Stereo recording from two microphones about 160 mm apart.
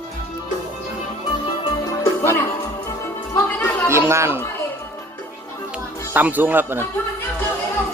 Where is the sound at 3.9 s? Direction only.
15° right (ahead or behind).